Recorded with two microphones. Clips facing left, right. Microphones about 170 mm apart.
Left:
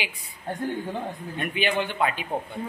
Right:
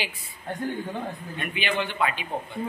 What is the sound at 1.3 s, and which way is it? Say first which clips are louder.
Speech: left 3 dB; 45° left (ahead or behind).